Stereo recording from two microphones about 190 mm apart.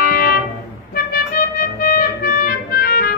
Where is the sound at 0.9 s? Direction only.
50° left (ahead or behind).